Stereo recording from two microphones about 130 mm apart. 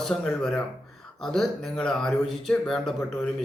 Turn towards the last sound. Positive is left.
turn(degrees=5)  # may be behind; listen again after turning